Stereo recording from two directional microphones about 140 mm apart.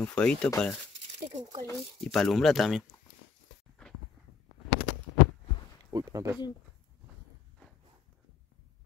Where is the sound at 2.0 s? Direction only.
5° left (ahead or behind).